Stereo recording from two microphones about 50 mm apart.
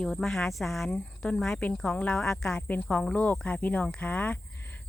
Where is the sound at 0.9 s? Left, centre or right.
Centre.